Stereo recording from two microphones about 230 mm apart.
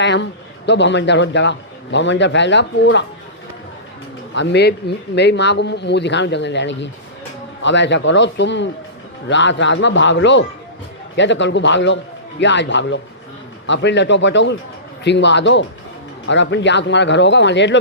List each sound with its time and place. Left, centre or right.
0.0 s a man's voice: left
4.4 s a man's voice: left